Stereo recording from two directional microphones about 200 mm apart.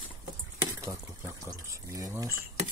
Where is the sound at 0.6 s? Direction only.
15° right (ahead or behind).